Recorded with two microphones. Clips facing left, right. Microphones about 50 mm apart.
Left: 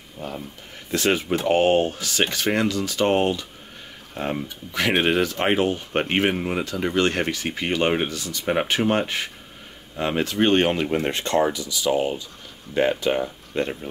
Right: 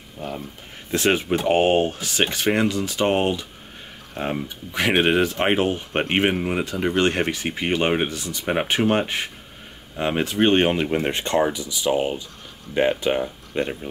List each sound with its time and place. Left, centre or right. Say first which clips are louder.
0.9 s speech: right 1 dB; right
6.6 s speech: right 1 dB; right